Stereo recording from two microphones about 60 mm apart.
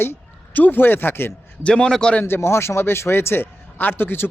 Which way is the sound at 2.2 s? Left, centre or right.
Left.